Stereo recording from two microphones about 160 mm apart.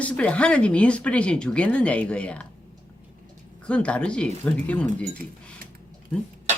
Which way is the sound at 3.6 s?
5° left (ahead or behind).